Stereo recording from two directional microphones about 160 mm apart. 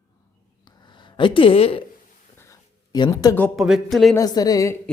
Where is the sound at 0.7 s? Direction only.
30° left (ahead or behind).